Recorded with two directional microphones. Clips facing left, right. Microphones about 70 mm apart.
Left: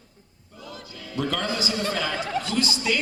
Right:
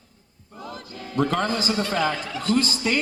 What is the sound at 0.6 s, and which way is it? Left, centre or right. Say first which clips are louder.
Music: right 3 dB; right.